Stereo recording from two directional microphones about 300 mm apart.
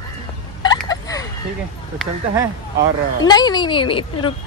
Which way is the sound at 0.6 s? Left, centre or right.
Centre.